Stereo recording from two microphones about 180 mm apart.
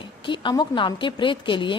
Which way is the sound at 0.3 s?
25° left (ahead or behind).